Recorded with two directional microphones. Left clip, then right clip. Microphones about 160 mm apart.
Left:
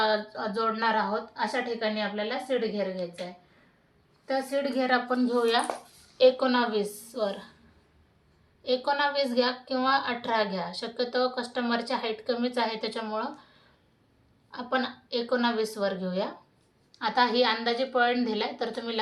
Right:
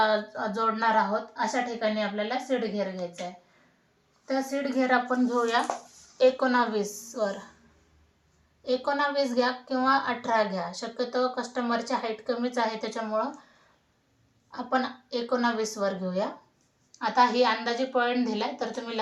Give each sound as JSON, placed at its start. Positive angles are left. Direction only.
{"t": 0.0, "sound": "a woman's voice", "side_deg": 20}
{"t": 4.3, "sound": "a woman's voice", "side_deg": 25}
{"t": 4.8, "sound": "a woman's voice", "side_deg": 15}
{"t": 8.6, "sound": "a woman's voice", "side_deg": 10}
{"t": 14.5, "sound": "a woman's voice", "side_deg": 15}